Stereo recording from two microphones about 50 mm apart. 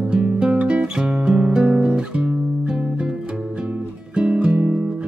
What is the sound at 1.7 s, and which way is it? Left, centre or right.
Guitar, right.